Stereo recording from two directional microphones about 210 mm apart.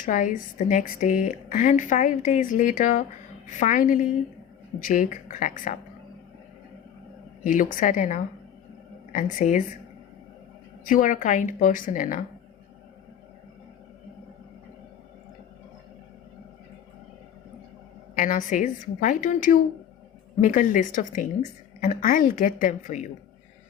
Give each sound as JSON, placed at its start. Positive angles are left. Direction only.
{"t": 0.0, "sound": "a woman's voice", "side_deg": 40}
{"t": 7.4, "sound": "a woman's voice", "side_deg": 40}
{"t": 10.8, "sound": "a woman's voice", "side_deg": 40}
{"t": 18.1, "sound": "a woman's voice", "side_deg": 35}